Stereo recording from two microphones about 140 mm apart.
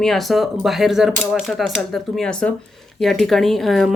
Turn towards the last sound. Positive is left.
turn(degrees=0)  # may be behind; listen again after turning